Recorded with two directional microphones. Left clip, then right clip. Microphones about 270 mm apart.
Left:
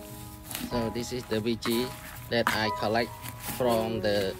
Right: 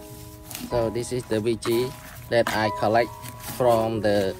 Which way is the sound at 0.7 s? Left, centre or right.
Centre.